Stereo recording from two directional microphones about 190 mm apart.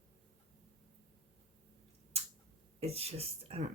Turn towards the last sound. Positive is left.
turn(degrees=-35)  # may be behind; listen again after turning